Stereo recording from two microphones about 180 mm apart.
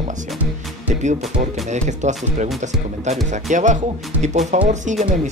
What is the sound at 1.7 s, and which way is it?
Speech, 40° right (ahead or behind).